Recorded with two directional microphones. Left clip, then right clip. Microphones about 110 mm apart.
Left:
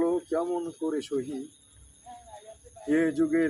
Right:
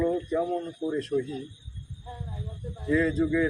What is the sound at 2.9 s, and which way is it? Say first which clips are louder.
Speech: even; 30° left (ahead or behind).